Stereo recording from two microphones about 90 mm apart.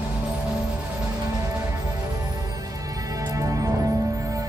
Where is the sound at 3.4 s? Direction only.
40° right (ahead or behind).